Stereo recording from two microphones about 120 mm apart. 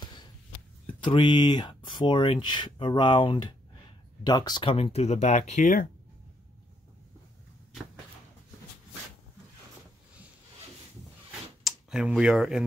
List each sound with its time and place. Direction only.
1.0 s speech: 40° left (ahead or behind)
4.7 s speech: 55° left (ahead or behind); by 5.8 s 80° left
11.6 s speech: 5° right (ahead or behind)